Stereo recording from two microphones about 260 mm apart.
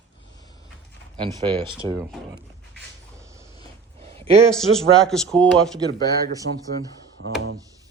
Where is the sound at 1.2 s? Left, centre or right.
Centre.